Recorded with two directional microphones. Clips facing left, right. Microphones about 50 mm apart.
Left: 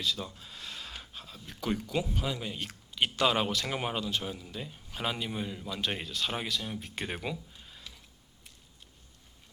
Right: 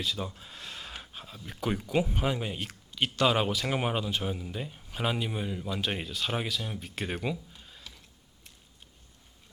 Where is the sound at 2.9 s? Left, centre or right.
Centre.